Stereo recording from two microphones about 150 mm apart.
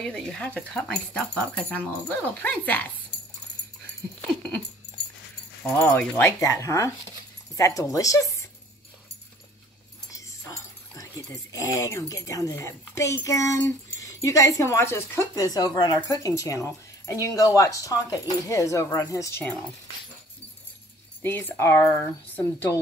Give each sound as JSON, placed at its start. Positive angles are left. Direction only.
{"t": 0.0, "sound": "speech", "side_deg": 5}
{"t": 4.4, "sound": "dog", "side_deg": 5}
{"t": 5.6, "sound": "speech", "side_deg": 10}
{"t": 10.1, "sound": "speech", "side_deg": 20}
{"t": 21.2, "sound": "speech", "side_deg": 15}